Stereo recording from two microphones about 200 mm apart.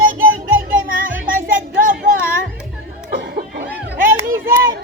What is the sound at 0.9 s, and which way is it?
Music, 45° right (ahead or behind).